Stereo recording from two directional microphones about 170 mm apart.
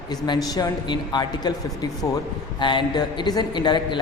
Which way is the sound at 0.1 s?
25° left (ahead or behind).